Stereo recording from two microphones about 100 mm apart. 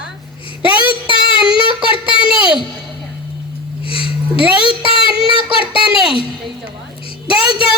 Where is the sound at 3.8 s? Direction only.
60° left (ahead or behind).